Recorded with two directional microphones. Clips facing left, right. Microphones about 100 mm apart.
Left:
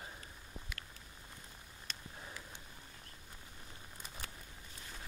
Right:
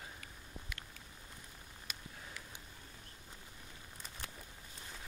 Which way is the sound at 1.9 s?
10° right (ahead or behind).